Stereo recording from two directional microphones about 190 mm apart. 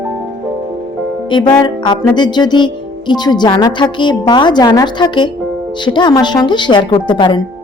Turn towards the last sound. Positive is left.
turn(degrees=25)  # may be behind; listen again after turning